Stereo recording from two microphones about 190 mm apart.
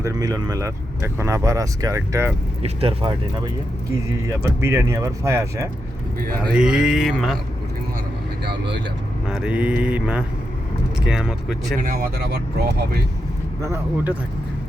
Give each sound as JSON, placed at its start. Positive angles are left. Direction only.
{"t": 0.0, "sound": "speech", "side_deg": -20}
{"t": 2.6, "sound": "speech", "side_deg": -30}
{"t": 4.3, "sound": "speech", "side_deg": -15}
{"t": 6.5, "sound": "mantra", "side_deg": -5}
{"t": 8.4, "sound": "speech", "side_deg": -65}
{"t": 9.3, "sound": "mantra", "side_deg": -5}
{"t": 11.9, "sound": "speech", "side_deg": -55}
{"t": 13.6, "sound": "speech", "side_deg": -10}